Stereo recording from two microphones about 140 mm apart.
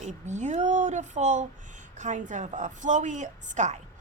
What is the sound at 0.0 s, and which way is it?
Speech, 60° right (ahead or behind).